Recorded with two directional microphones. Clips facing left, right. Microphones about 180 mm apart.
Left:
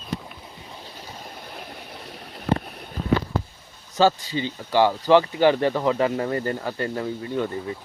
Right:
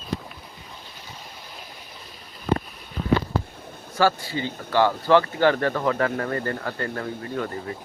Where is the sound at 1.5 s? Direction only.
65° left (ahead or behind).